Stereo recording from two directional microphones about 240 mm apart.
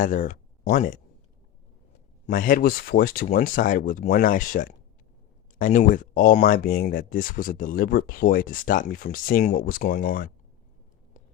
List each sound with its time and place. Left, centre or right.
0.0 s speech: left
2.2 s speech: left